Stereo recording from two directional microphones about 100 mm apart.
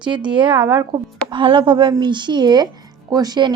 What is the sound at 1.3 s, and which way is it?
A woman's voice, 55° right (ahead or behind).